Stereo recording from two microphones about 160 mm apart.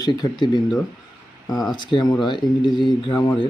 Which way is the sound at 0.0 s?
25° left (ahead or behind).